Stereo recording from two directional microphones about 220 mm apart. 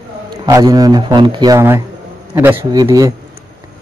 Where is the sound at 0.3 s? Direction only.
15° right (ahead or behind).